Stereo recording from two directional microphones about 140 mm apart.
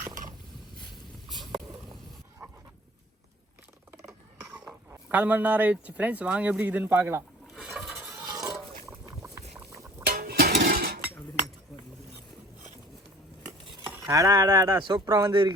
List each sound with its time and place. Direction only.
0.0 s mechanisms: 70° right (ahead or behind)
4.9 s a man's voice: 10° right (ahead or behind)
7.5 s a sound: 5° right (ahead or behind)
8.1 s a sound: 25° right (ahead or behind)
8.9 s boat: 20° right (ahead or behind)
10.1 s dishes: 90° right
14.0 s speech: 25° right (ahead or behind)
15.3 s speech: 35° right (ahead or behind)